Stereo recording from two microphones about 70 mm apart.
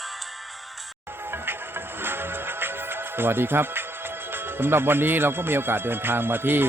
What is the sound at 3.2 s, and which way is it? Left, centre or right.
A man's voice, right.